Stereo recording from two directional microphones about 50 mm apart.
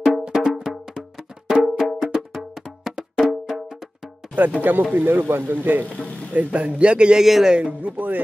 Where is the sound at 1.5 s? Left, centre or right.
Centre.